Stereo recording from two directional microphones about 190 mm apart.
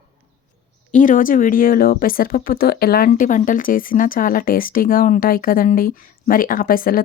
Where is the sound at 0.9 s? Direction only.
40° left (ahead or behind).